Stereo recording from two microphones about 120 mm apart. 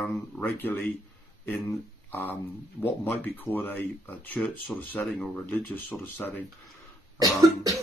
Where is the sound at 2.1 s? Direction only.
15° left (ahead or behind).